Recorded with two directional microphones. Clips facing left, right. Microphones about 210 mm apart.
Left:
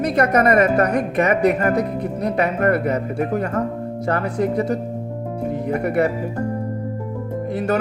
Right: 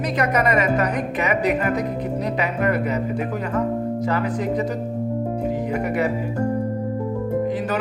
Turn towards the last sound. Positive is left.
turn(degrees=50)  # may be behind; listen again after turning